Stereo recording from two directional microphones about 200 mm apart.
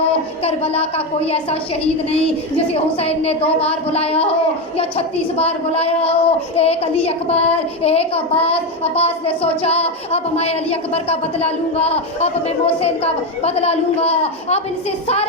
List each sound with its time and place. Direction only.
0.1 s a woman's voice: 30° left (ahead or behind)
3.0 s a child's voice: 30° left (ahead or behind)